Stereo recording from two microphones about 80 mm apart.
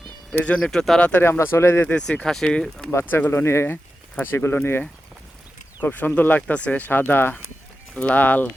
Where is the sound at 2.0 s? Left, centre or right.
Centre.